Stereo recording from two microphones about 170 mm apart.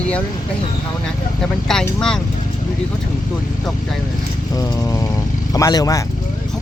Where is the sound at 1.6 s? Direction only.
5° left (ahead or behind).